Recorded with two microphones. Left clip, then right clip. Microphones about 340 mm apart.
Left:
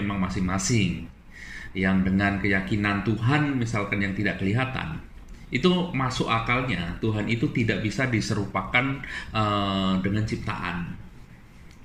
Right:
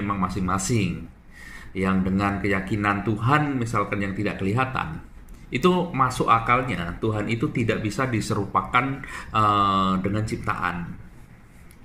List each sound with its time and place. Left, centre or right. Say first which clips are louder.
0.2 s speech: right 3 dB; centre
1.7 s speech: right 1 dB; centre